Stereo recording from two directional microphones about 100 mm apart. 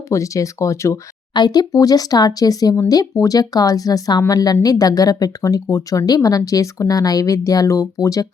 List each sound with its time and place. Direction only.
0.1 s speech: 35° left (ahead or behind)
1.3 s speech: 45° left (ahead or behind)